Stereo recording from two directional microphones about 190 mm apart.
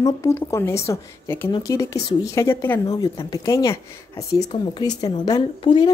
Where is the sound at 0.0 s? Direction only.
15° left (ahead or behind).